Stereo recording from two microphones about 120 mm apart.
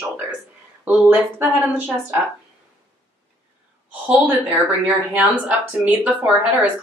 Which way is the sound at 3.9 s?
15° right (ahead or behind).